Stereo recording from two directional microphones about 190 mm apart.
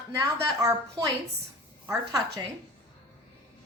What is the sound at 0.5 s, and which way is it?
A woman's voice, 15° right (ahead or behind).